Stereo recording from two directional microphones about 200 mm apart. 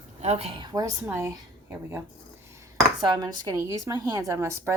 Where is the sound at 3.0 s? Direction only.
20° right (ahead or behind).